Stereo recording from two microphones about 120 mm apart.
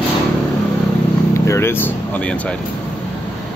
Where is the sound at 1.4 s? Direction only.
20° left (ahead or behind).